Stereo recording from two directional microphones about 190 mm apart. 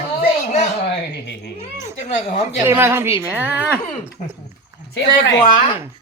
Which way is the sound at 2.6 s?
10° right (ahead or behind).